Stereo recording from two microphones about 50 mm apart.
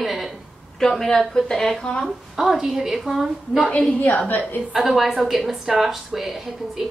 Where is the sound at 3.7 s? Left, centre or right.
Left.